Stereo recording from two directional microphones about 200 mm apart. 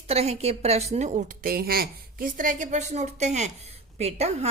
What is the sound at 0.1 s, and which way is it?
Speech, 30° right (ahead or behind).